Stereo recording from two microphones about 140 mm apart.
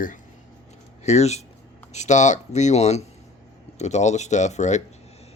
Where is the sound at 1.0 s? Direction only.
50° left (ahead or behind).